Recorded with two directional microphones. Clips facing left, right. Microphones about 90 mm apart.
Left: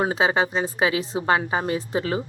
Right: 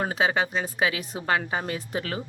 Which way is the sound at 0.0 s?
30° left (ahead or behind).